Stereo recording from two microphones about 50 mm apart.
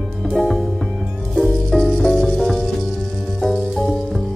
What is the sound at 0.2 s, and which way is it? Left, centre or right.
Music, centre.